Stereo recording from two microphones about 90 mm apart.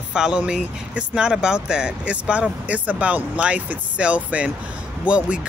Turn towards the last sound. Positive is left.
turn(degrees=-15)  # may be behind; listen again after turning